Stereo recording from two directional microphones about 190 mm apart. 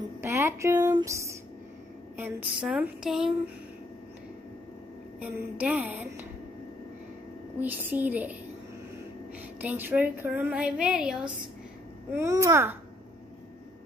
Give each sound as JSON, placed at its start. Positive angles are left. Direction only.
{"t": 0.2, "sound": "a sound", "side_deg": -15}
{"t": 2.1, "sound": "speech", "side_deg": -10}
{"t": 5.2, "sound": "a woman's voice", "side_deg": -10}
{"t": 7.5, "sound": "a woman's voice", "side_deg": -10}
{"t": 9.6, "sound": "a woman's voice", "side_deg": -10}
{"t": 12.1, "sound": "a woman's voice", "side_deg": -15}